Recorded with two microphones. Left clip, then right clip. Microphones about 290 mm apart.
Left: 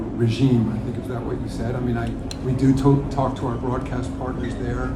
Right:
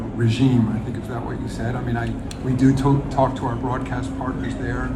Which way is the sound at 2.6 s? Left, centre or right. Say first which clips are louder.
Even; right.